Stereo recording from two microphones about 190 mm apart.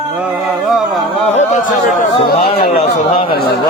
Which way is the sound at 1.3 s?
40° left (ahead or behind).